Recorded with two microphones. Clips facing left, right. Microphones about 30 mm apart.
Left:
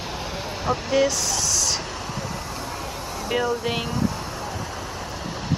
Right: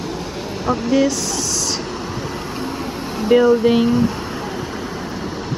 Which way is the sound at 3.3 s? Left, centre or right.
Centre.